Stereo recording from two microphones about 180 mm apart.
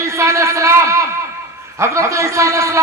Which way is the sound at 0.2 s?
15° right (ahead or behind).